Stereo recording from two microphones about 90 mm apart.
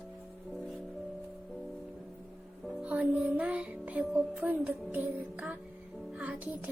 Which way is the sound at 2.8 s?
15° right (ahead or behind).